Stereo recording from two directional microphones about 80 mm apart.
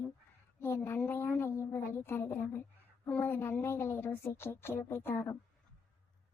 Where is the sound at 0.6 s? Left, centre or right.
Left.